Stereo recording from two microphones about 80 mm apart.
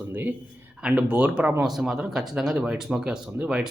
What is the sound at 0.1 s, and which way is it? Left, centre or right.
Speech, right.